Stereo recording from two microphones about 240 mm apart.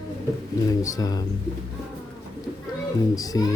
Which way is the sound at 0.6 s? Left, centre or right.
Centre.